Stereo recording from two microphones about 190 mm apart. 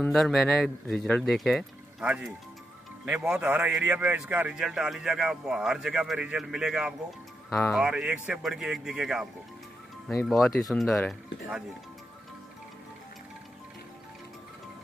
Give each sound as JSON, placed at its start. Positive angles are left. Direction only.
{"t": 0.0, "sound": "a man's voice", "side_deg": 0}